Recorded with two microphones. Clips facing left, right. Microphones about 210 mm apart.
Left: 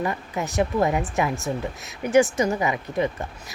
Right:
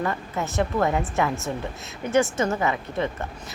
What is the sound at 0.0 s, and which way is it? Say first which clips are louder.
Speech: even; 15° left (ahead or behind).